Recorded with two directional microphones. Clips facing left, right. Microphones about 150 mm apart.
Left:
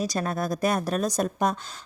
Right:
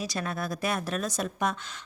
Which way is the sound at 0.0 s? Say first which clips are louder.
Left 5 dB; 40° left (ahead or behind).